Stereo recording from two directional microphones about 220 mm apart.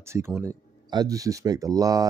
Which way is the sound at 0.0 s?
10° right (ahead or behind).